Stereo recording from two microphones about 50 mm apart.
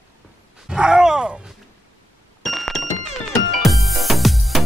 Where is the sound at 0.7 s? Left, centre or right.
Centre.